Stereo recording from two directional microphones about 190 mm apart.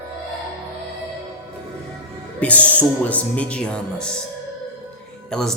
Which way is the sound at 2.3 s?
5° left (ahead or behind).